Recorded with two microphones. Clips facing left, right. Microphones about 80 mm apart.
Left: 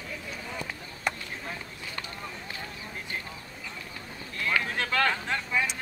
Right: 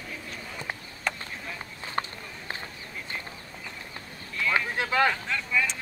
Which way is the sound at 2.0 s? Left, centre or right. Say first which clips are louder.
Right 10 dB; right.